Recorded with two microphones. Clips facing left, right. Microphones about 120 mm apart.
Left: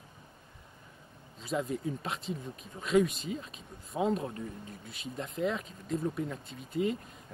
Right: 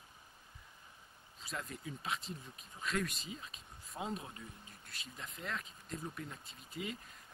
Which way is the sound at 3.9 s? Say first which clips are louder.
Left 12 dB; 40° left (ahead or behind).